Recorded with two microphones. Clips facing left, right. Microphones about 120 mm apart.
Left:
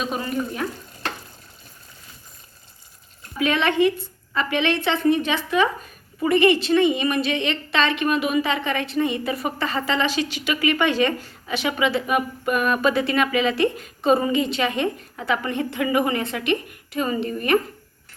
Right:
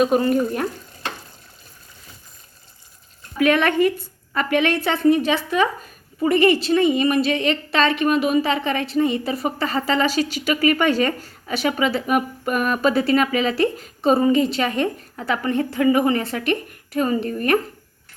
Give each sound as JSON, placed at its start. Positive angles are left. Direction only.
{"t": 0.0, "sound": "speech", "side_deg": -50}
{"t": 3.3, "sound": "speech", "side_deg": -50}